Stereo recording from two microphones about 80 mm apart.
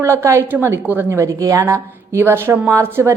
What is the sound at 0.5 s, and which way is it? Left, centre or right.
A woman's voice, right.